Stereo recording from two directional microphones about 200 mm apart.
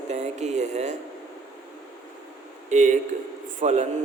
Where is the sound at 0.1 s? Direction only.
35° right (ahead or behind).